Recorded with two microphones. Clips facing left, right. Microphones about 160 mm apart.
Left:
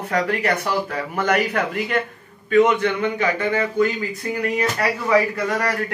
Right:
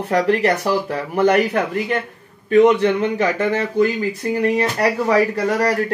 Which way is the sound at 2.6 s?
40° right (ahead or behind).